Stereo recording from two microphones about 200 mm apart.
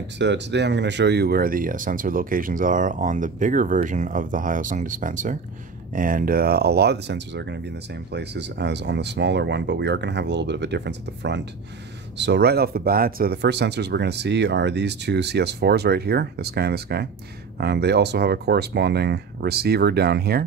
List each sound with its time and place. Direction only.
0.2 s speech: 60° right (ahead or behind)